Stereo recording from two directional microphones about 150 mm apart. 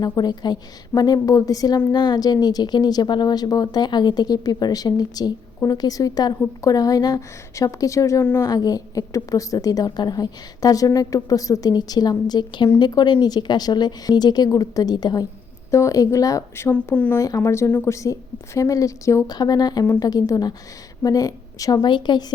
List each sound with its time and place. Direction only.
0.0 s a woman's voice: 25° left (ahead or behind); by 17.2 s 10° left (ahead or behind)
17.2 s a woman's voice: 20° left (ahead or behind)